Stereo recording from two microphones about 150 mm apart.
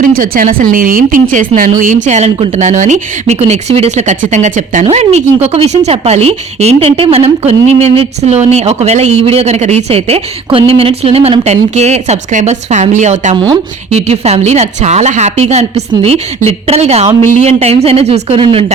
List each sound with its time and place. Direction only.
0.0 s speech: 65° right (ahead or behind); by 18.4 s 45° right (ahead or behind)